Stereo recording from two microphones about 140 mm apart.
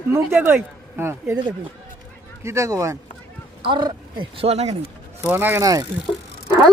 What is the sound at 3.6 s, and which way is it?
Speech, 35° right (ahead or behind).